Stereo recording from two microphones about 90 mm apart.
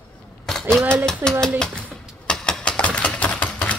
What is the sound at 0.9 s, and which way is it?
Speech, 10° left (ahead or behind).